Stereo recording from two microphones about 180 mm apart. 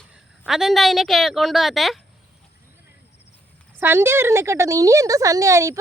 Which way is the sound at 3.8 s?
15° right (ahead or behind).